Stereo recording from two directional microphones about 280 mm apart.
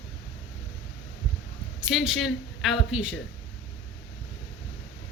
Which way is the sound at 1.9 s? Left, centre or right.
Centre.